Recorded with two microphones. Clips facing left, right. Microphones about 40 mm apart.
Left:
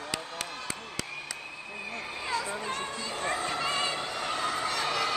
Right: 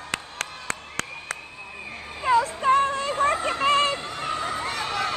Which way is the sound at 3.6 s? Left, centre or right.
Right.